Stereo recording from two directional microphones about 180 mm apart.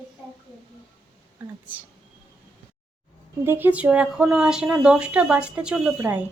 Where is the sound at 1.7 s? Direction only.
10° right (ahead or behind).